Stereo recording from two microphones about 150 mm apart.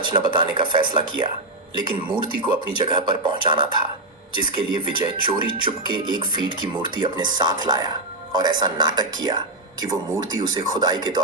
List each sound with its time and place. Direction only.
0.0 s speech: 30° right (ahead or behind)
10.8 s speech: 25° right (ahead or behind)